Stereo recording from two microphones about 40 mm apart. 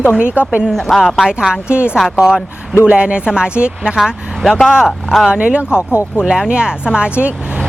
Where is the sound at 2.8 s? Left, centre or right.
Right.